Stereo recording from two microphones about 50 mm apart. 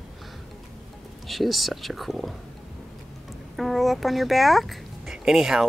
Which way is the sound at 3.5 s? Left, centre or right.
Centre.